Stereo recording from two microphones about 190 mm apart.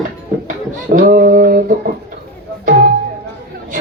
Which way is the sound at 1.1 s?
45° right (ahead or behind).